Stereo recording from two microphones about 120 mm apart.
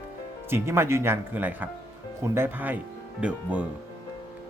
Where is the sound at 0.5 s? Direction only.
20° right (ahead or behind).